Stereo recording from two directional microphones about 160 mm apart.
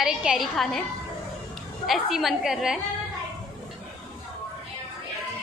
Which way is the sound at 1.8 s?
Centre (ahead or behind).